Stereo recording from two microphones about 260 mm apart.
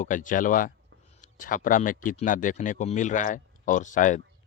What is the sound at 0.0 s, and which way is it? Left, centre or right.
Speech, left.